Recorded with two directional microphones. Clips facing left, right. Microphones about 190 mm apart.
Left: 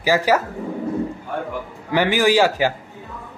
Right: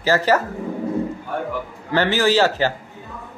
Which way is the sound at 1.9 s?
10° left (ahead or behind).